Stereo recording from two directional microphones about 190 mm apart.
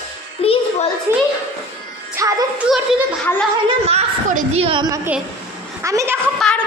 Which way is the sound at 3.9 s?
40° right (ahead or behind).